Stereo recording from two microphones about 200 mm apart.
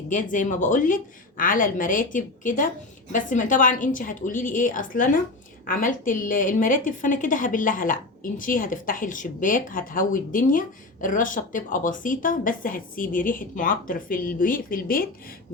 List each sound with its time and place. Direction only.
0.1 s a woman's voice: 40° left (ahead or behind)